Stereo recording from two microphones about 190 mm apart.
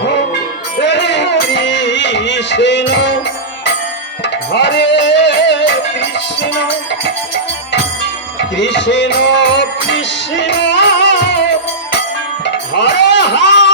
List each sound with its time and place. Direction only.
0.8 s music: 70° left (ahead or behind)
4.5 s music: 65° left (ahead or behind)
8.5 s music: 70° left (ahead or behind)
12.7 s a sound: 65° left (ahead or behind)